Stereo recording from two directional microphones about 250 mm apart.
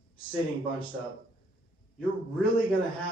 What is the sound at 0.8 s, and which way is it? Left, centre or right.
Speech, left.